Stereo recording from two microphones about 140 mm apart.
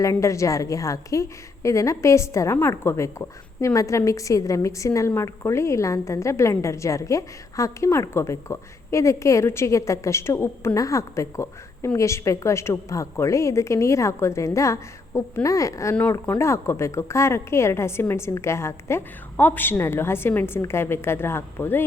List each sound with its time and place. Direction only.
0.0 s a woman's voice: 20° left (ahead or behind)